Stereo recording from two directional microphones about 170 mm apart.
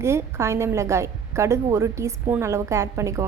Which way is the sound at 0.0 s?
15° right (ahead or behind).